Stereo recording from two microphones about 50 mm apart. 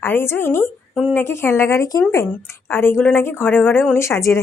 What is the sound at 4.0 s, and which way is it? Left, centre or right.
Speech, left.